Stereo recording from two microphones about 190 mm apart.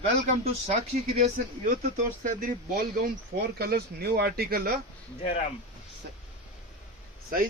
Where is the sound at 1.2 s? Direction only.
40° right (ahead or behind).